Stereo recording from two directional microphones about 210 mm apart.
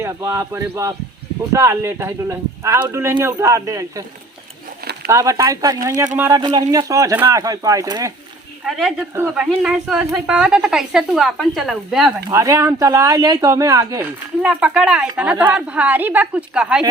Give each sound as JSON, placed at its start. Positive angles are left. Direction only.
{"t": 0.0, "sound": "speech", "side_deg": -15}
{"t": 5.0, "sound": "speech", "side_deg": -15}
{"t": 8.6, "sound": "a woman's voice", "side_deg": 0}
{"t": 12.3, "sound": "speech", "side_deg": -15}
{"t": 14.4, "sound": "a woman's voice", "side_deg": -5}